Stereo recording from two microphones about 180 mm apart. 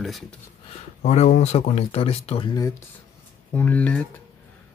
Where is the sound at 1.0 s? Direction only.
40° left (ahead or behind).